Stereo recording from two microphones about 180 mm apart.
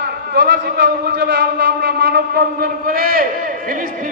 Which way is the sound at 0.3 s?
75° right (ahead or behind).